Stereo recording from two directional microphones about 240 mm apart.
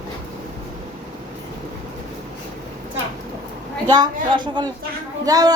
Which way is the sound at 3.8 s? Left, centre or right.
Centre.